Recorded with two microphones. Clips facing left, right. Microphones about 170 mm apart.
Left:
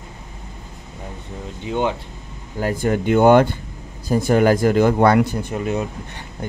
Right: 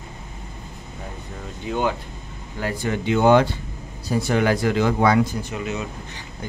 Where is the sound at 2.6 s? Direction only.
45° left (ahead or behind).